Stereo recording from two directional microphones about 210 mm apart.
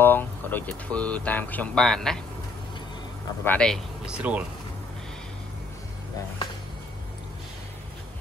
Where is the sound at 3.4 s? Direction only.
5° left (ahead or behind).